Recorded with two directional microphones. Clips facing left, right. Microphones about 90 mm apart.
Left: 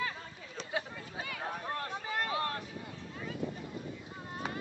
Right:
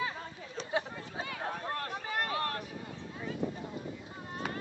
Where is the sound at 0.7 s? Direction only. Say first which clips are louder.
Right 3 dB; 25° right (ahead or behind).